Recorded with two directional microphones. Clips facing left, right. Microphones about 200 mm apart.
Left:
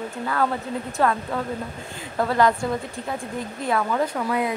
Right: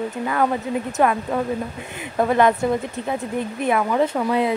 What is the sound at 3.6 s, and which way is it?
Speech, 20° right (ahead or behind).